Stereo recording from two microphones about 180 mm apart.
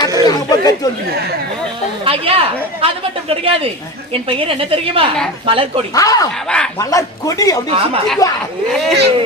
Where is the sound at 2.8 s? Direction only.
30° right (ahead or behind).